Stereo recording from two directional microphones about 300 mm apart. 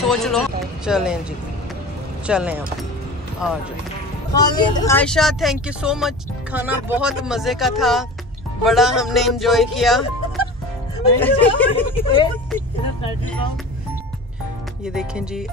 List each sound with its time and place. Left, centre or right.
0.0 s speech: centre
2.2 s speech: centre
4.4 s speech: centre
11.7 s a woman's voice: centre
15.0 s speech: centre